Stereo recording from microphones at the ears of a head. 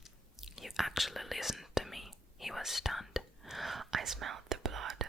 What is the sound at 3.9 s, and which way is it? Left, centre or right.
Whispering, right.